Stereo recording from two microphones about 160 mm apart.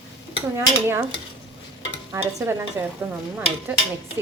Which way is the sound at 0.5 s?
15° right (ahead or behind).